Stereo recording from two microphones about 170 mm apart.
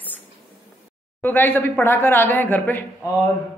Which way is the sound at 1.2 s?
10° left (ahead or behind).